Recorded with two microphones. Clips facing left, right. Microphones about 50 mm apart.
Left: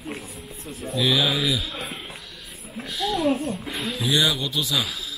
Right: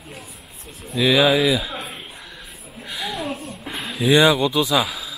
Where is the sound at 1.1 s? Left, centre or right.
Right.